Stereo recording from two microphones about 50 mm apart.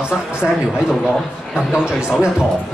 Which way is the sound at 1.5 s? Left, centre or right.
Centre.